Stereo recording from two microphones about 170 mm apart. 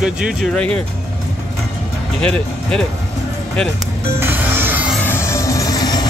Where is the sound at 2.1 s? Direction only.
5° left (ahead or behind).